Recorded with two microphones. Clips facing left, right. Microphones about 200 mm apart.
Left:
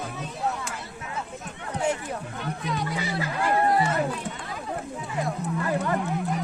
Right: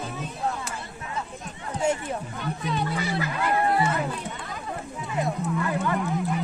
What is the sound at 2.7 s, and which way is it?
Chatter, 30° right (ahead or behind).